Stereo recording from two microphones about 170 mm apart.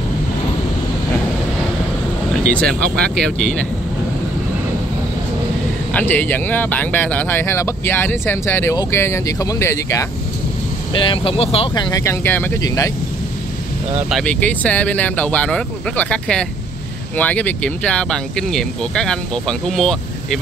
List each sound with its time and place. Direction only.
2.5 s speech: 5° left (ahead or behind)
5.9 s speech: 10° left (ahead or behind)
10.9 s speech: 30° left (ahead or behind)
14.1 s speech: 10° left (ahead or behind)